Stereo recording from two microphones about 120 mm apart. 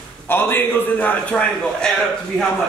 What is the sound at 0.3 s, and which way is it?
A man's voice, 15° left (ahead or behind).